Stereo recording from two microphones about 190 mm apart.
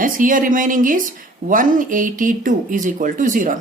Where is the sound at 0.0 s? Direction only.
45° right (ahead or behind).